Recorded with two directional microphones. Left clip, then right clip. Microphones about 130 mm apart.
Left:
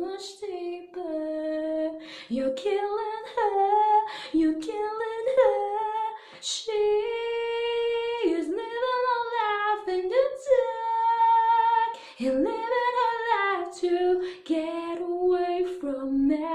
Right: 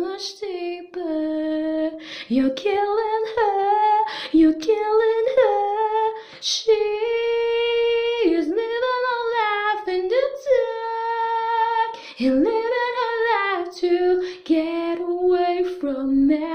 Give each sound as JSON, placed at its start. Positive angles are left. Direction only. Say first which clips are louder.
{"t": 1.4, "sound": "lullaby", "louder": "right 5 dB", "side_deg": -40}
{"t": 2.3, "sound": "humming", "louder": "right 6 dB", "side_deg": -40}
{"t": 6.7, "sound": "humming", "louder": "right 5 dB", "side_deg": -30}
{"t": 12.2, "sound": "female singing", "louder": "right 7 dB", "side_deg": -25}